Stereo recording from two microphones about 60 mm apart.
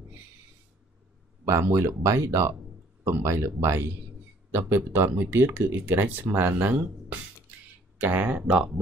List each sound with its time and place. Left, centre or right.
1.4 s speech: right
4.5 s speech: right
8.0 s speech: right